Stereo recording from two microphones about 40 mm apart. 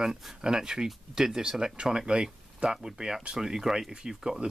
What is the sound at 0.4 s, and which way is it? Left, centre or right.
Speech, centre.